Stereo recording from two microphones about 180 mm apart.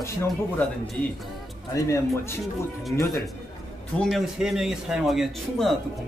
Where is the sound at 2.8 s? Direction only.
Centre (ahead or behind).